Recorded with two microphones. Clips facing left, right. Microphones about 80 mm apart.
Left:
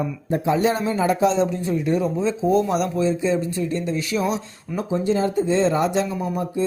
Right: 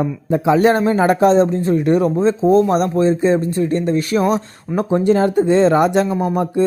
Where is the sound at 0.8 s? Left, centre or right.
Right.